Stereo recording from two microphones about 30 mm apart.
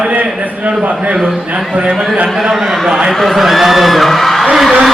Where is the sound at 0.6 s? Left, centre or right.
Right.